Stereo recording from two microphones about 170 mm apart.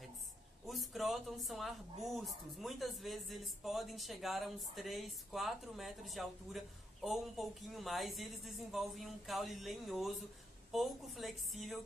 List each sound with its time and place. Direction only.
0.7 s speech: centre (ahead or behind)